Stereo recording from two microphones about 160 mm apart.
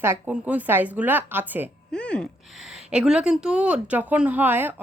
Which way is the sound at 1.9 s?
5° left (ahead or behind).